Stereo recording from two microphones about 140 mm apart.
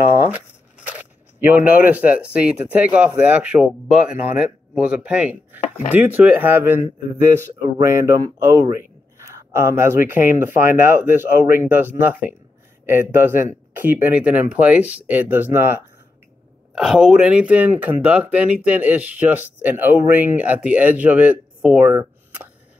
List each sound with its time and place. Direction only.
0.3 s speech: 10° right (ahead or behind)
7.8 s speech: 20° right (ahead or behind)
16.7 s speech: 5° right (ahead or behind)